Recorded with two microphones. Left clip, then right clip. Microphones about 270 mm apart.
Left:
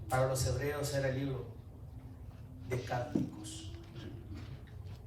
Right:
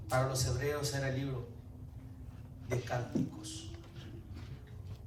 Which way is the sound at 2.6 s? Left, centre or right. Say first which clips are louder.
Right 1 dB; right.